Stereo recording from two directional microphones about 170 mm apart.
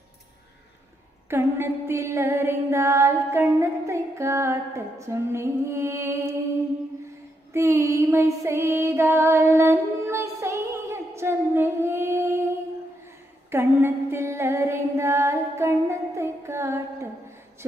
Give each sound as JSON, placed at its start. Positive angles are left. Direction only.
{"t": 1.3, "sound": "music", "side_deg": -15}
{"t": 7.5, "sound": "music", "side_deg": -15}
{"t": 13.5, "sound": "female singing", "side_deg": -15}